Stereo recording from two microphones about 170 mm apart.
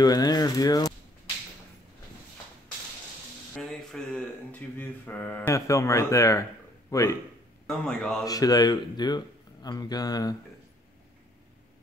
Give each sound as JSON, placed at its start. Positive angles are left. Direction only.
{"t": 0.0, "sound": "speech", "side_deg": 20}
{"t": 3.5, "sound": "speech", "side_deg": 5}
{"t": 7.6, "sound": "speech", "side_deg": 5}
{"t": 8.3, "sound": "speech", "side_deg": 20}